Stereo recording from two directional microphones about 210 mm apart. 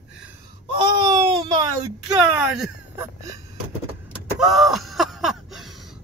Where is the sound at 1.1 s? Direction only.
20° right (ahead or behind).